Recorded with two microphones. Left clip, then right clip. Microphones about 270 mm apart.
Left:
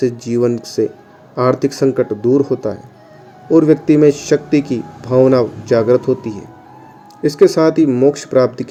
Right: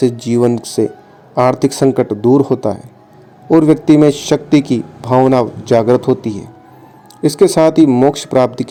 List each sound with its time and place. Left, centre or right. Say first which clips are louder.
0.0 s a man's voice: right 2 dB; right